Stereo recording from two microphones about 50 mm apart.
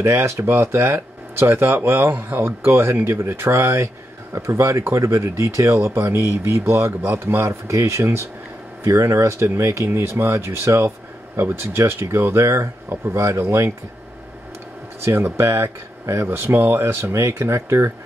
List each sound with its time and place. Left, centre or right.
0.0 s speech: right
8.8 s speech: right
10.0 s speech: right
15.0 s speech: right
16.3 s speech: right